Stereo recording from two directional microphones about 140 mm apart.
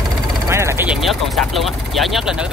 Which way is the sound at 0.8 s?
Centre (ahead or behind).